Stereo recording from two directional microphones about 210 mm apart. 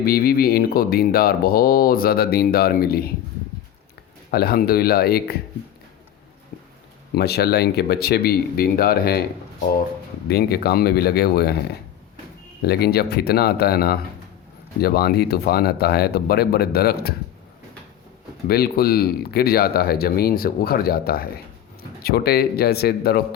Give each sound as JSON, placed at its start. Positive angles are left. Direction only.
{"t": 0.0, "sound": "speech", "side_deg": 45}
{"t": 4.3, "sound": "speech", "side_deg": 50}
{"t": 7.1, "sound": "speech", "side_deg": 50}
{"t": 10.2, "sound": "speech", "side_deg": 50}
{"t": 12.6, "sound": "speech", "side_deg": 50}
{"t": 18.4, "sound": "speech", "side_deg": 50}